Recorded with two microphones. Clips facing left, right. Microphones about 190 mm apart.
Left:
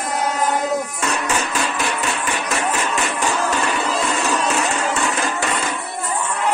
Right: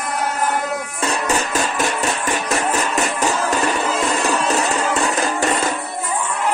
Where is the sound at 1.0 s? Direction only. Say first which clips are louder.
Right 2 dB; 35° right (ahead or behind).